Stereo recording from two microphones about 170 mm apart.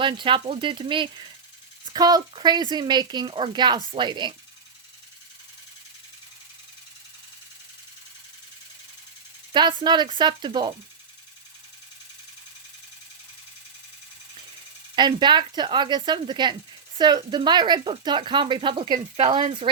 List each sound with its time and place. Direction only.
0.0 s a woman's voice: 30° right (ahead or behind)
9.5 s a woman's voice: 25° right (ahead or behind)
14.9 s a woman's voice: 25° right (ahead or behind)